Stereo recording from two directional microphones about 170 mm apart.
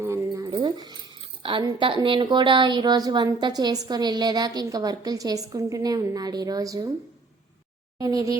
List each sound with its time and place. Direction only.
0.0 s a sound: 15° right (ahead or behind)
1.6 s a woman's voice: 25° right (ahead or behind)
7.9 s a woman's voice: 20° right (ahead or behind)